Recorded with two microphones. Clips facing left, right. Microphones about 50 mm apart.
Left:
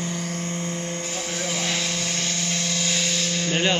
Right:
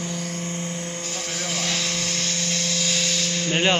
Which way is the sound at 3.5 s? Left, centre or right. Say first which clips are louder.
Right 2 dB; centre.